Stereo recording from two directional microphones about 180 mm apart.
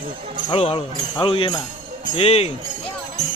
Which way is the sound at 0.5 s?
30° left (ahead or behind).